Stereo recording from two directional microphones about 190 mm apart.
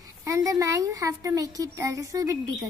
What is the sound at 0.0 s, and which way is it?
A woman's voice, 15° right (ahead or behind).